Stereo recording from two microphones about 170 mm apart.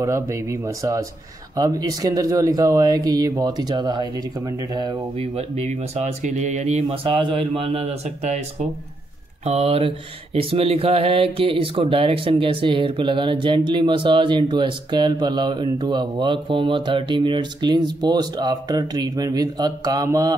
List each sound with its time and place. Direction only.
0.0 s speech: 20° right (ahead or behind)
5.2 s speech: 35° right (ahead or behind)
9.4 s speech: 40° right (ahead or behind); by 20.3 s 20° right (ahead or behind)